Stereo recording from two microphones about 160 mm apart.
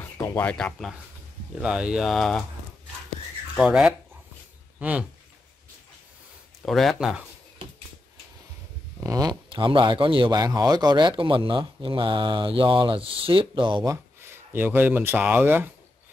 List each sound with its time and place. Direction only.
0.2 s speech: 15° left (ahead or behind)
3.5 s speech: 5° right (ahead or behind)
6.6 s speech: centre (ahead or behind)
9.0 s speech: 25° right (ahead or behind)
14.2 s speech: 15° right (ahead or behind)